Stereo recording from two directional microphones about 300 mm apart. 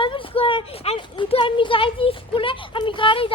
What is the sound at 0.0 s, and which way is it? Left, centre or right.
Speech, centre.